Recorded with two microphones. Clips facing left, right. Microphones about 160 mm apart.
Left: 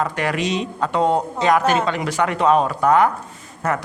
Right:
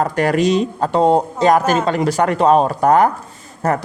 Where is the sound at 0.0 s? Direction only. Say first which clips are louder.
Right 6 dB; 40° right (ahead or behind).